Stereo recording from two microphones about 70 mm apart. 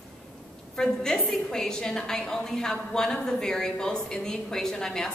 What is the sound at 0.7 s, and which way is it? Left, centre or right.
A woman's voice, centre.